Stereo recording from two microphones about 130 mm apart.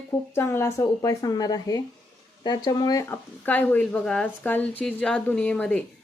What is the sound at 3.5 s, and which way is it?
Speech, 15° left (ahead or behind).